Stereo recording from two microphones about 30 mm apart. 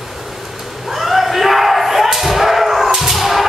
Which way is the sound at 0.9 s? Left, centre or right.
Centre.